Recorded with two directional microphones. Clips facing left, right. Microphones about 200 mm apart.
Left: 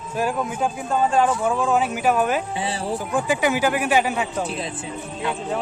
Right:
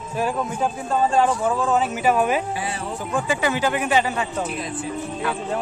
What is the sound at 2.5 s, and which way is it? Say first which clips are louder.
Speech: left 2 dB; 30° left (ahead or behind).